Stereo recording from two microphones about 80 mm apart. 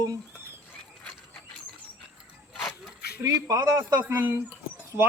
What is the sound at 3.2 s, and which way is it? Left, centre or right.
Speech, right.